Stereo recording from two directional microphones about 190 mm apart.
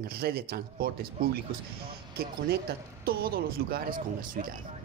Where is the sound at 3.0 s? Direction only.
50° right (ahead or behind).